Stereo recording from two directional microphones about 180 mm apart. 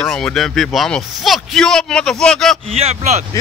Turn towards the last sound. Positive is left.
turn(degrees=-35)  # may be behind; listen again after turning